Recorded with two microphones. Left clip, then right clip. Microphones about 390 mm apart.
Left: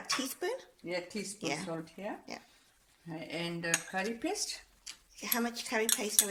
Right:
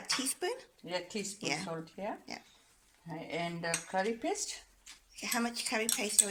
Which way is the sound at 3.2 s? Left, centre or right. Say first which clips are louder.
Right 1 dB; centre.